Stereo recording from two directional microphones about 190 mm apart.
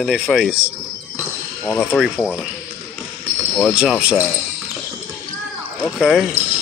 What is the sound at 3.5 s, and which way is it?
Speech, centre (ahead or behind).